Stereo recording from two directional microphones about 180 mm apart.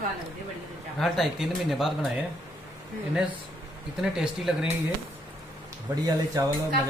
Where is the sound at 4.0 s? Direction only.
5° right (ahead or behind).